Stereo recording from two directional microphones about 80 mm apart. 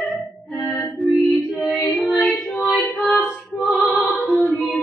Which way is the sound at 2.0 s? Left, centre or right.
Centre.